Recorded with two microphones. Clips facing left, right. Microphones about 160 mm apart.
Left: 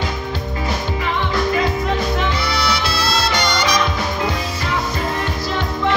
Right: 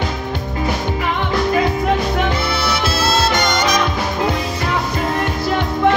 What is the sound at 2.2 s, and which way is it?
Music, 50° right (ahead or behind).